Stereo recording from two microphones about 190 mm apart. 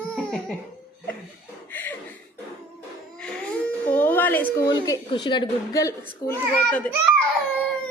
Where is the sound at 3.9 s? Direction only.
10° left (ahead or behind).